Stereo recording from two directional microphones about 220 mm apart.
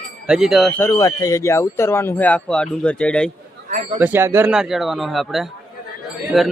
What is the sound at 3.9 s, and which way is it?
A man's voice, 10° right (ahead or behind).